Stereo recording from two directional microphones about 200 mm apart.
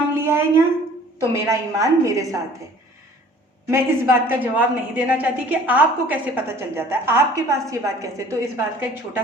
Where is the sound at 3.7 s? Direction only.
10° right (ahead or behind).